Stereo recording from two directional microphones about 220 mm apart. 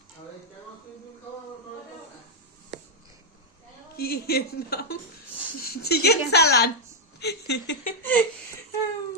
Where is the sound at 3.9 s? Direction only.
45° left (ahead or behind).